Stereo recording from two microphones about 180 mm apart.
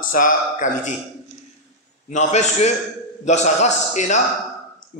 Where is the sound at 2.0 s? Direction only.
40° left (ahead or behind).